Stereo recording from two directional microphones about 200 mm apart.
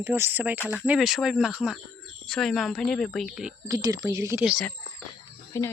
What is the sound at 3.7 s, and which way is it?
Speech, 20° right (ahead or behind).